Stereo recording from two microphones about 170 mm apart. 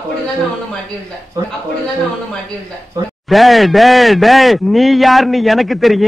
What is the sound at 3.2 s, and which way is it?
Speech, centre (ahead or behind).